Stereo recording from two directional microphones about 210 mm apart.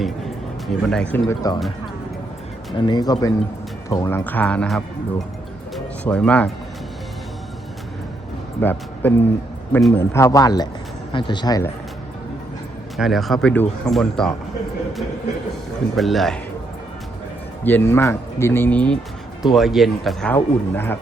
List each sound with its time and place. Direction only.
0.7 s speech: 5° left (ahead or behind)
2.8 s speech: 20° left (ahead or behind)
5.7 s music: 5° left (ahead or behind)
8.6 s speech: 10° left (ahead or behind)
13.0 s speech: centre (ahead or behind)
16.0 s speech: centre (ahead or behind)
17.6 s speech: 10° left (ahead or behind)